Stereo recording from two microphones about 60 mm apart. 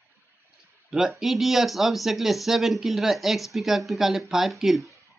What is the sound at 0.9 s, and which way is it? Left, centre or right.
Speech, centre.